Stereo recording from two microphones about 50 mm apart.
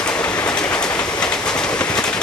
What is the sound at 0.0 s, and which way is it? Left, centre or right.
Train, centre.